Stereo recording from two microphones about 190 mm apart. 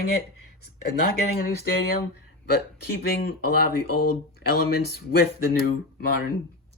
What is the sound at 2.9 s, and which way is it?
Speech, 55° left (ahead or behind).